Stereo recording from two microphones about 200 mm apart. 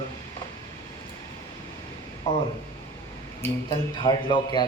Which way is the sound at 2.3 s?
30° left (ahead or behind).